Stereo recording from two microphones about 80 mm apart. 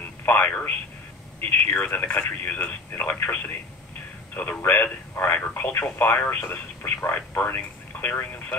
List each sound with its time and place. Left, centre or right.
0.2 s speech: left
4.6 s speech: left